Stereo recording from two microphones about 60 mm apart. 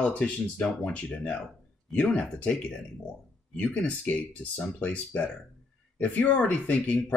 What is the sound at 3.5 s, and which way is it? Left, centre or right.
Speech, left.